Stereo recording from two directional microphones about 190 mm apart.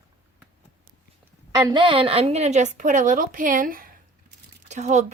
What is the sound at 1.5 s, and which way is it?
A woman's voice, 25° right (ahead or behind).